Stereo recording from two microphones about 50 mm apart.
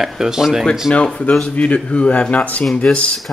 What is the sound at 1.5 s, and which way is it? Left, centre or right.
Speech, left.